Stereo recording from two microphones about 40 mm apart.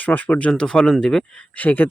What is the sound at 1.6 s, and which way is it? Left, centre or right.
Speech, left.